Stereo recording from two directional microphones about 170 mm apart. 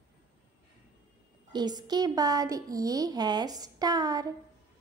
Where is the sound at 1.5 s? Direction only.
25° right (ahead or behind).